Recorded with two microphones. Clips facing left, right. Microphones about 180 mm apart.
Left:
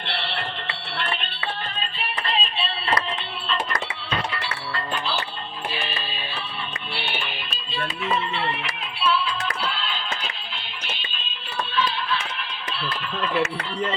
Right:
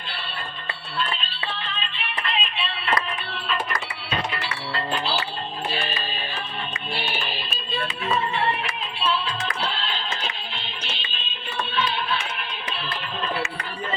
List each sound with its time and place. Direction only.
0.0 s music: 70° left (ahead or behind)
1.7 s music: 40° left (ahead or behind)
4.3 s music: 30° right (ahead or behind)
6.9 s music: 40° right (ahead or behind)
9.0 s music: 40° right (ahead or behind)